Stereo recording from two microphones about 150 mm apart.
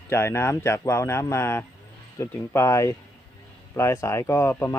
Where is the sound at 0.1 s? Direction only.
15° left (ahead or behind).